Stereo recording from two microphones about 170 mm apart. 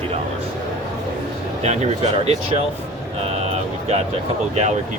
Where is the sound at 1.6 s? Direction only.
40° right (ahead or behind).